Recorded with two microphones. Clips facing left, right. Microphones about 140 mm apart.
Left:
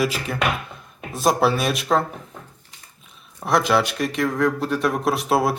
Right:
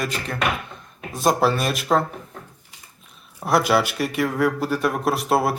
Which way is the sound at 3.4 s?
5° right (ahead or behind).